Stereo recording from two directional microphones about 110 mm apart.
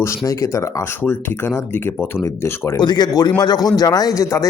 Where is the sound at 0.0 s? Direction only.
25° left (ahead or behind).